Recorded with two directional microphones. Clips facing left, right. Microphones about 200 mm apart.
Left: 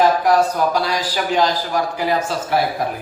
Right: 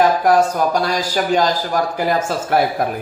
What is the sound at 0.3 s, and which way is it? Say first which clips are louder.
A man's voice: right 1 dB; 50° right (ahead or behind).